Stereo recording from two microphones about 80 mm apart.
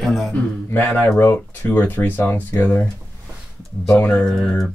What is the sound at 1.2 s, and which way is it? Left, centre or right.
Speech, left.